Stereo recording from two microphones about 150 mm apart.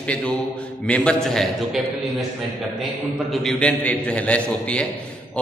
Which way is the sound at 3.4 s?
10° left (ahead or behind).